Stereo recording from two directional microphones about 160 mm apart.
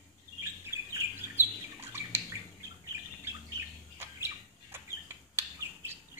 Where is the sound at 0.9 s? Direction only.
15° right (ahead or behind).